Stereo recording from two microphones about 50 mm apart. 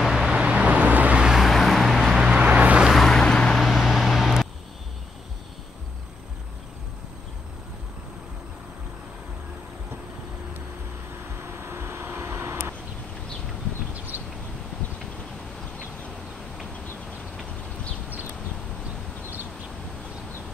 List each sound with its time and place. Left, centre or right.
0.0 s vehicle: centre
0.4 s vehicle: right
1.2 s vehicle: centre
1.5 s vehicle: centre
2.1 s vehicle: centre
3.1 s vehicle: centre
3.5 s vehicle: centre
11.3 s vehicle: right
13.9 s a sound: right